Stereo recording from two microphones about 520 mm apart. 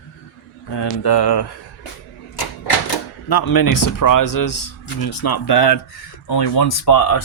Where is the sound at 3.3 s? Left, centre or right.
Left.